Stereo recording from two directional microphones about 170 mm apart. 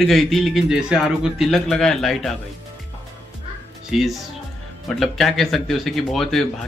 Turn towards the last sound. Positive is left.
turn(degrees=0)  # may be behind; listen again after turning